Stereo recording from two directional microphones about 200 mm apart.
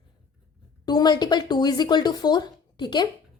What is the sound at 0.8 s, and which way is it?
A woman's voice, 20° left (ahead or behind).